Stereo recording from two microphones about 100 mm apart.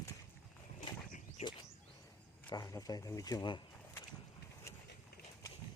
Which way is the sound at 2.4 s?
45° left (ahead or behind).